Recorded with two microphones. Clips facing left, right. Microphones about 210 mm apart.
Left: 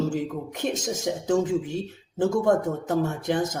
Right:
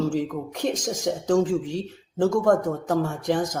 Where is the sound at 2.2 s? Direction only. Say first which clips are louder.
Right 2 dB; 5° left (ahead or behind).